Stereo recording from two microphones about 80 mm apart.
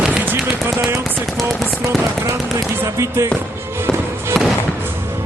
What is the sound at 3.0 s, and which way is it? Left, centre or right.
Speech, right.